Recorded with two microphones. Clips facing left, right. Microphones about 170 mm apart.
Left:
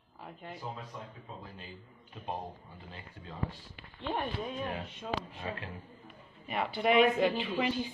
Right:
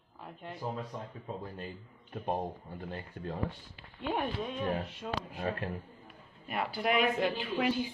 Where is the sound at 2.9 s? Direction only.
55° right (ahead or behind).